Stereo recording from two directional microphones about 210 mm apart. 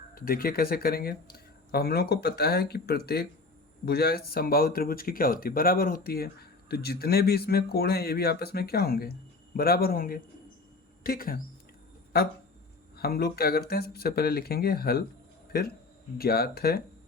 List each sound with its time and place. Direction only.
0.1 s speech: 45° left (ahead or behind)
13.0 s speech: 45° left (ahead or behind)